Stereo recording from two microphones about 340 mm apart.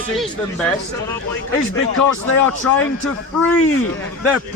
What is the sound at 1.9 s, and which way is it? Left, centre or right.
Speech, left.